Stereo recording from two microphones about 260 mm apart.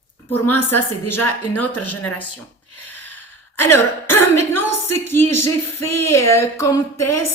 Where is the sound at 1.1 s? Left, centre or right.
Centre.